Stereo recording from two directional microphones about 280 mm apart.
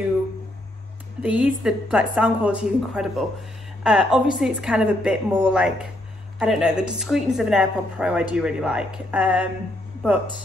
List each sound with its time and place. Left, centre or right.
1.2 s a woman's voice: centre